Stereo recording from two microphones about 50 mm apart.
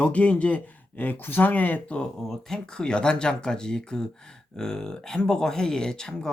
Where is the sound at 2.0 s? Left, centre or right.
Centre.